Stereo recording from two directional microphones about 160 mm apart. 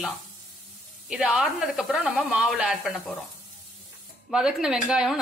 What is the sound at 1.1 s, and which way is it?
A woman's voice, 5° right (ahead or behind).